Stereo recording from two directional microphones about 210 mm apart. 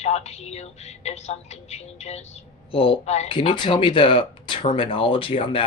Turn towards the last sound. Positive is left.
turn(degrees=25)  # may be behind; listen again after turning